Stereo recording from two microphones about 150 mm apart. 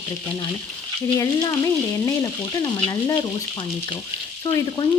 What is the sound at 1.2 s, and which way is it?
Frying, 25° left (ahead or behind).